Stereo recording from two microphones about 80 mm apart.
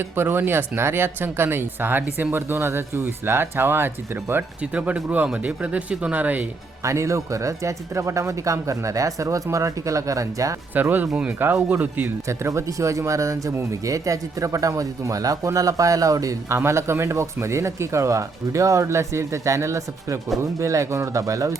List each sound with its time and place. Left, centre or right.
0.0 s speech: right
6.8 s speech: right
10.8 s speech: right
11.3 s speech: right
12.3 s speech: right